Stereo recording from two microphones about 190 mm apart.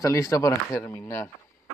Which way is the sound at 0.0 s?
15° left (ahead or behind).